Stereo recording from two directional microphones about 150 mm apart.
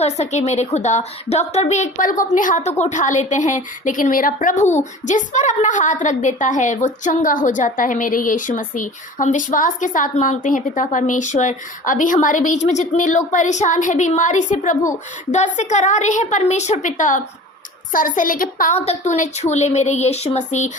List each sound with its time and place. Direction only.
0.0 s a woman's voice: 50° left (ahead or behind)
18.9 s a woman's voice: 55° left (ahead or behind)